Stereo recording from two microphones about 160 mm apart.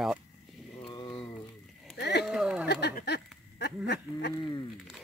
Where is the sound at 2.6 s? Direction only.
90° left.